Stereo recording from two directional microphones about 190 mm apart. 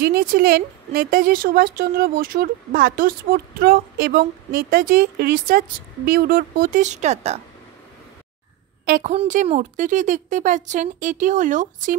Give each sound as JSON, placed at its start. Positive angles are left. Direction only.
{"t": 0.0, "sound": "speech", "side_deg": -50}
{"t": 8.8, "sound": "a woman's voice", "side_deg": -40}